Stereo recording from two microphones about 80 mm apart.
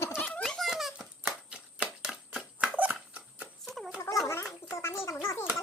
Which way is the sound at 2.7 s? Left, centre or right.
Centre.